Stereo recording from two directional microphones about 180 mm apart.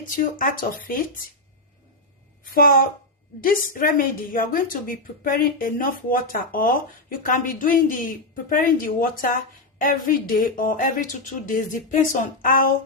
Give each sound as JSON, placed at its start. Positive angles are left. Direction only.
{"t": 0.0, "sound": "a woman's voice", "side_deg": 50}
{"t": 2.4, "sound": "a woman's voice", "side_deg": 55}